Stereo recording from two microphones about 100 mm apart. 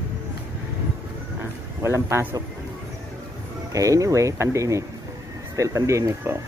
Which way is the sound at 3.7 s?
35° right (ahead or behind).